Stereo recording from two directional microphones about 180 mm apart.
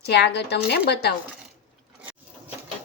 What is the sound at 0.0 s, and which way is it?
A woman's voice, 70° left (ahead or behind).